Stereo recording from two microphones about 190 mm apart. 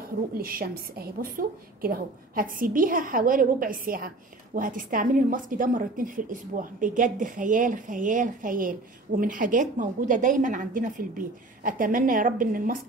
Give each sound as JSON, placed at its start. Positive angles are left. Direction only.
{"t": 0.4, "sound": "a woman's voice", "side_deg": -50}